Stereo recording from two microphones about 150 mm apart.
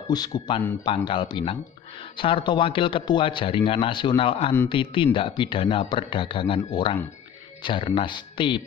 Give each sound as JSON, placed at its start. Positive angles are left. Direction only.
{"t": 0.1, "sound": "a man's voice", "side_deg": 25}